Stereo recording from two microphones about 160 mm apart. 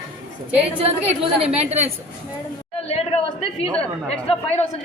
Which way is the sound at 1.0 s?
40° right (ahead or behind).